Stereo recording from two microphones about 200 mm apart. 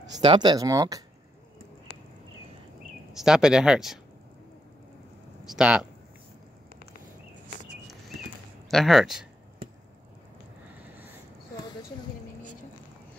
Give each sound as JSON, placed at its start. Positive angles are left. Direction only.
{"t": 0.2, "sound": "speech", "side_deg": -25}
{"t": 3.1, "sound": "speech", "side_deg": 0}
{"t": 5.5, "sound": "speech", "side_deg": -5}
{"t": 8.6, "sound": "speech", "side_deg": 0}